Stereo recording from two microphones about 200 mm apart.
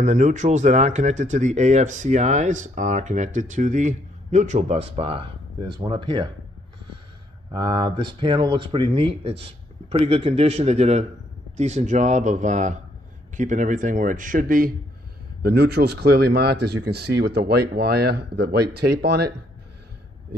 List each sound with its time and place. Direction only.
0.0 s speech: 35° right (ahead or behind)
7.5 s speech: 25° right (ahead or behind); by 14.7 s 45° right (ahead or behind)
15.4 s speech: 55° right (ahead or behind)